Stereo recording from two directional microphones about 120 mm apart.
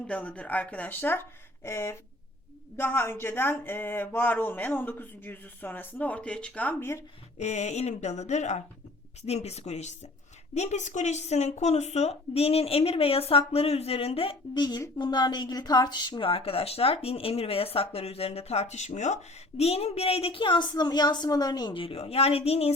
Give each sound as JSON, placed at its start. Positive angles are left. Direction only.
{"t": 0.1, "sound": "speech", "side_deg": 10}
{"t": 7.3, "sound": "speech", "side_deg": 75}
{"t": 9.2, "sound": "a woman's voice", "side_deg": 60}
{"t": 14.5, "sound": "a woman's voice", "side_deg": 35}